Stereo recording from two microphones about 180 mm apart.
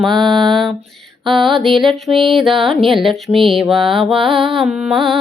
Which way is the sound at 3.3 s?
30° right (ahead or behind).